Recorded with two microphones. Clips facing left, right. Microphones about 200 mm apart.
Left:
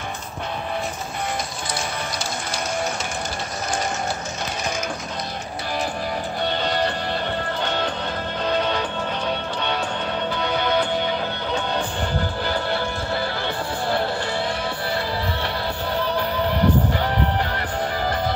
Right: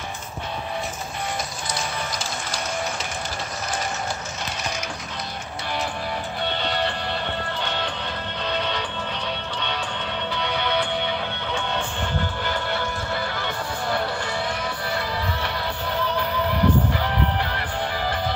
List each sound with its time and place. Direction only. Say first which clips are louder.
6.4 s music: left 3 dB; 40° left (ahead or behind)
16.2 s music: left 1 dB; 35° left (ahead or behind)